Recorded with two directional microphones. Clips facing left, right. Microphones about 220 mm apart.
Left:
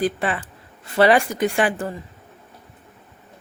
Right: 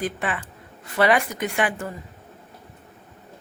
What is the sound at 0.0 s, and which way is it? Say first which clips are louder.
Speech: left 5 dB; 35° left (ahead or behind).